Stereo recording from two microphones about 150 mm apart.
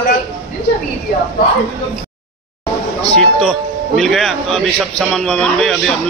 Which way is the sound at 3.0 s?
5° left (ahead or behind).